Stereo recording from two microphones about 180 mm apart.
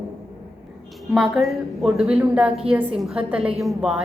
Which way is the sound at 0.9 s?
Centre (ahead or behind).